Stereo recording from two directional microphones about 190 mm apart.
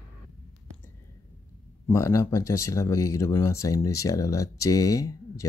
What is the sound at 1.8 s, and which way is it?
Speech, 15° left (ahead or behind).